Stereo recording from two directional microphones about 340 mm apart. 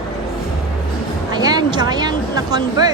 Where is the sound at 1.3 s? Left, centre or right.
Centre.